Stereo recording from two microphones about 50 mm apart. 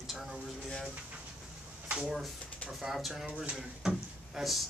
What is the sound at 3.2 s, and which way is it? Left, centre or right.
Speech, right.